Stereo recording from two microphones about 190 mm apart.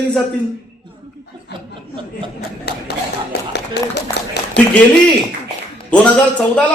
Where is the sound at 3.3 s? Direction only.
60° left (ahead or behind).